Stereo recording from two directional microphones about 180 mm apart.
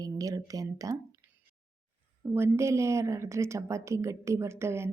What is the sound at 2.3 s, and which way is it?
A woman's voice, 15° right (ahead or behind).